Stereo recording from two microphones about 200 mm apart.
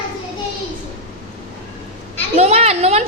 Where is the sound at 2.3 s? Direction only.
30° right (ahead or behind).